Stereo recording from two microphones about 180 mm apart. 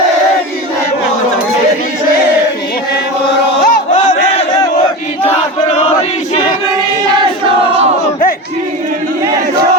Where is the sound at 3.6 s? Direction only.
55° left (ahead or behind).